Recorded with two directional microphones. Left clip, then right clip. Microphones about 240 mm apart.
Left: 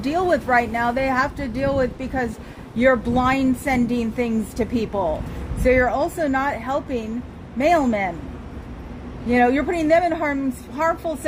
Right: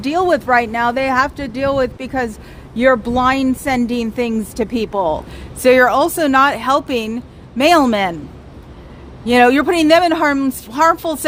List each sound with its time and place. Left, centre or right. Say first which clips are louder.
0.0 s a woman's voice: right 5 dB; right
9.2 s a woman's voice: right 7 dB; right